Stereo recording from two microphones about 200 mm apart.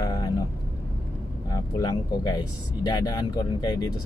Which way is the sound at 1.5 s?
20° left (ahead or behind).